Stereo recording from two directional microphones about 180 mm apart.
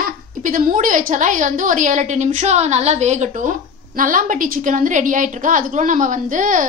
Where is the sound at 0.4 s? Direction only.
50° right (ahead or behind).